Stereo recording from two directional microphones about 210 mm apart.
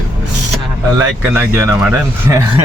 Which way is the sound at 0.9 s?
10° right (ahead or behind).